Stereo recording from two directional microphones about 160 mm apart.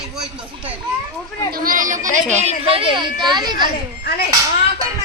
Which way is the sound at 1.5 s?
60° right (ahead or behind).